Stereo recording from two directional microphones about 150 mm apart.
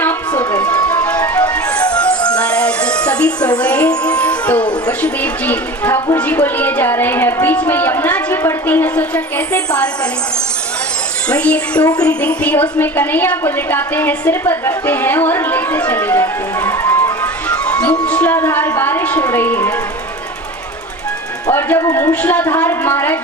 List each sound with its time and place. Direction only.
0.0 s a sound: 15° left (ahead or behind)
1.0 s music: 10° left (ahead or behind)
4.9 s speech: 10° left (ahead or behind)
11.3 s a woman's voice: 10° left (ahead or behind)
17.5 s music: 5° left (ahead or behind)
21.5 s speech: 15° left (ahead or behind)